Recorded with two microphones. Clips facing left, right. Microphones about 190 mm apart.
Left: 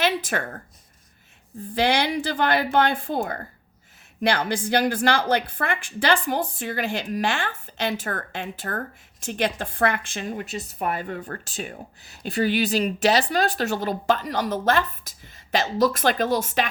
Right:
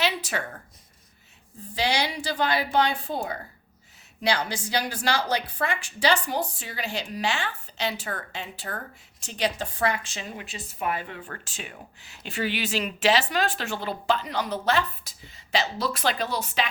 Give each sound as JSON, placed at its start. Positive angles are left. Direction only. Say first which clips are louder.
{"t": 0.0, "sound": "a woman's voice", "louder": "left 4 dB", "side_deg": 50}
{"t": 1.7, "sound": "speech", "louder": "left 5 dB", "side_deg": 55}